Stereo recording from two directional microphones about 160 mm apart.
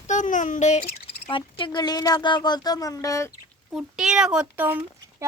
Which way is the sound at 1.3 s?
30° left (ahead or behind).